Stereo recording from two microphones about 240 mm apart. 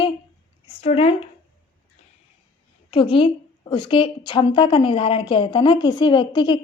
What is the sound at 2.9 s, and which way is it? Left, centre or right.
A woman's voice, left.